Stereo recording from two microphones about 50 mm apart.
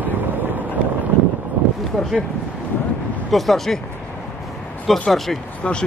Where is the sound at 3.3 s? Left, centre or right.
Centre.